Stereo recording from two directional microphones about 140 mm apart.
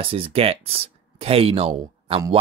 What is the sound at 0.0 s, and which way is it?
Speech, 45° right (ahead or behind).